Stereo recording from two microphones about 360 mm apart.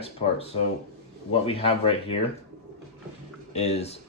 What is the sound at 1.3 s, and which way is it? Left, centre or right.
Speech, centre.